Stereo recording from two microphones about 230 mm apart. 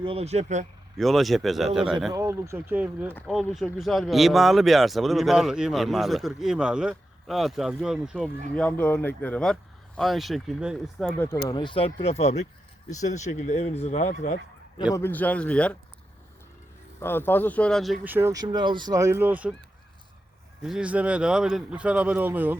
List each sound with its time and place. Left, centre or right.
0.0 s speech: right
0.9 s speech: centre
2.1 s speech: centre
3.1 s speech: centre
11.2 s speech: centre; by 14.3 s left
14.9 s speech: centre
17.0 s speech: centre
20.6 s speech: centre